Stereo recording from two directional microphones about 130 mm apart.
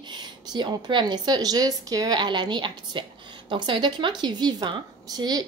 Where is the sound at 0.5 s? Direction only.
35° right (ahead or behind).